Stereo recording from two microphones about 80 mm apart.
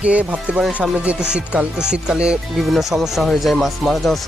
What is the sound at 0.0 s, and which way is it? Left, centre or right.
Speech, centre.